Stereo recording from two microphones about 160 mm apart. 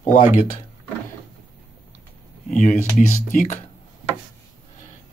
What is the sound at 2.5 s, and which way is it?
Speech, 50° left (ahead or behind).